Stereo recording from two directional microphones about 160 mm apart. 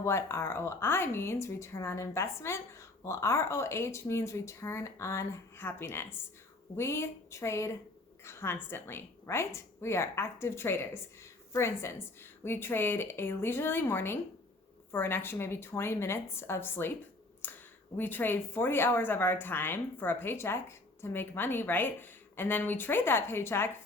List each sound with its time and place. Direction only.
0.0 s a woman's voice: 15° left (ahead or behind)
17.4 s a sound: 10° left (ahead or behind)
17.9 s a woman's voice: 10° left (ahead or behind)